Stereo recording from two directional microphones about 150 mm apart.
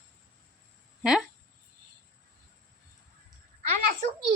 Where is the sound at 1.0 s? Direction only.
5° right (ahead or behind).